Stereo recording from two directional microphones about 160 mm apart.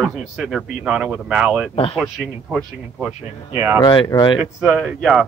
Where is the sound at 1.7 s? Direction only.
35° left (ahead or behind).